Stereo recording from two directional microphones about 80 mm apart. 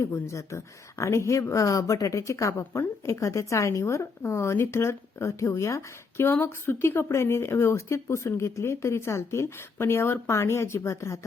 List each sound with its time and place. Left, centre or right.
0.0 s speech: left